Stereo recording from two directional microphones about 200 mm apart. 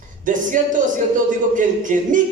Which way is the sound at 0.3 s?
40° right (ahead or behind).